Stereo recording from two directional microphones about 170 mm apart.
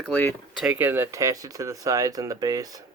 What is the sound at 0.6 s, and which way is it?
Speech, 10° right (ahead or behind).